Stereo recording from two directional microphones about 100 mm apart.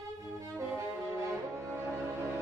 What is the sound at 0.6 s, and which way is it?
Music, 25° right (ahead or behind).